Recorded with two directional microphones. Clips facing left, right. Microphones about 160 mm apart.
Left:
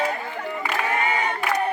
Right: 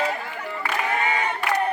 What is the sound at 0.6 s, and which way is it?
Crowd, 10° left (ahead or behind).